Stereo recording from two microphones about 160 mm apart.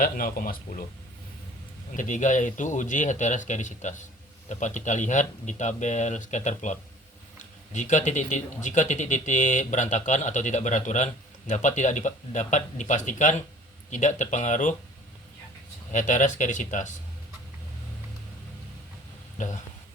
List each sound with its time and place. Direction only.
0.0 s speech: 65° left (ahead or behind)
1.9 s a man's voice: 55° left (ahead or behind)
15.9 s a man's voice: 50° left (ahead or behind)